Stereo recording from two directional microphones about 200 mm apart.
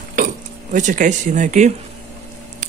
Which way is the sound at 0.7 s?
40° right (ahead or behind).